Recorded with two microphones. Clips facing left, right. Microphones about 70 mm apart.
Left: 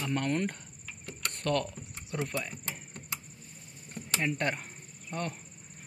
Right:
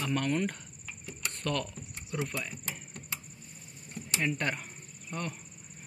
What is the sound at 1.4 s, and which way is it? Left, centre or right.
Speech, left.